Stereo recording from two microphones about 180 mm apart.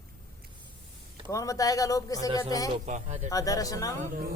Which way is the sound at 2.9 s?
40° right (ahead or behind).